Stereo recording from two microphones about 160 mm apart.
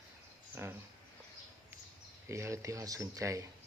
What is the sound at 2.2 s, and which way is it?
Speech, 15° right (ahead or behind).